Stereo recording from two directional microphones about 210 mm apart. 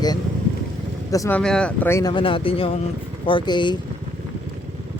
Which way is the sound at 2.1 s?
25° left (ahead or behind).